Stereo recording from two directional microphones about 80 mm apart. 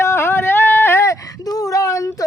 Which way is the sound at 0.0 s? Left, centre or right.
Left.